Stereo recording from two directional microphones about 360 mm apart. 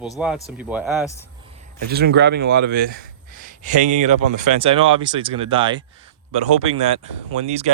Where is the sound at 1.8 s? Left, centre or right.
Right.